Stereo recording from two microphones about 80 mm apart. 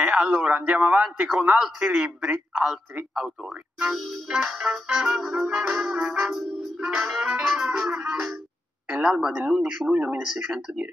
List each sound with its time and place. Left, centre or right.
0.0 s a man's voice: centre
4.5 s a man's voice: centre